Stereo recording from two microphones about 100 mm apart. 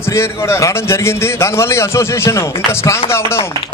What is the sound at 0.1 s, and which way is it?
A man's voice, 25° left (ahead or behind).